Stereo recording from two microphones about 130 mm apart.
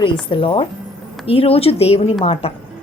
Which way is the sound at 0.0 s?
40° left (ahead or behind).